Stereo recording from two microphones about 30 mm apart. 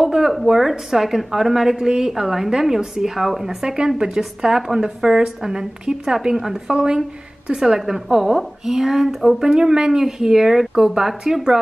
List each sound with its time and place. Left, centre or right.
0.0 s a woman's voice: centre
3.6 s speech: right
4.2 s a woman's voice: centre
7.8 s a woman's voice: centre
9.6 s a woman's voice: right